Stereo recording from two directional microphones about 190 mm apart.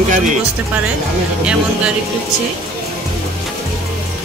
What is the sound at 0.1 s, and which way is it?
Speech, 40° right (ahead or behind).